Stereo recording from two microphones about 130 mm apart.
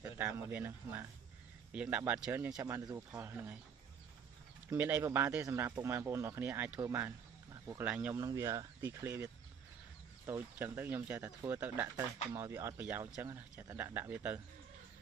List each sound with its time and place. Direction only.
0.0 s speech: 15° right (ahead or behind)
4.6 s speech: 15° right (ahead or behind)
8.1 s speech: 25° right (ahead or behind)